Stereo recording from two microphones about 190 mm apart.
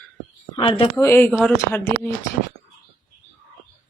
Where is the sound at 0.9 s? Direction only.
10° left (ahead or behind).